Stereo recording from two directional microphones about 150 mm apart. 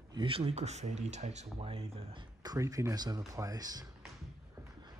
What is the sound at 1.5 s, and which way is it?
Speech, 35° right (ahead or behind).